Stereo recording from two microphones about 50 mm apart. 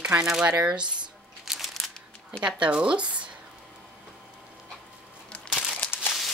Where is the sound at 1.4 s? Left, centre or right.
Centre.